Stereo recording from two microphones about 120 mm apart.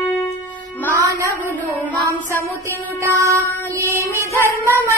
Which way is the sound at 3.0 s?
25° right (ahead or behind).